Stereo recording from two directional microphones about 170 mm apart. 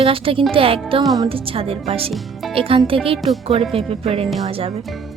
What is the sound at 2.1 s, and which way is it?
Speech, centre (ahead or behind).